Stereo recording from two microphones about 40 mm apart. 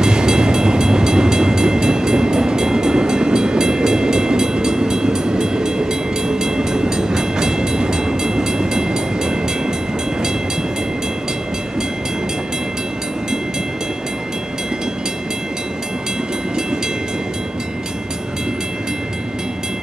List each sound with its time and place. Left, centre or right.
0.0 s train: centre